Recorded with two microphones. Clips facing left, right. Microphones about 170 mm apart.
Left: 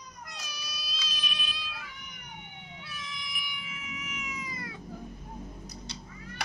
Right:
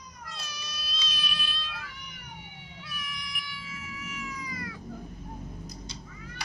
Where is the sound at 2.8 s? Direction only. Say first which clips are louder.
Right 2 dB; 25° left (ahead or behind).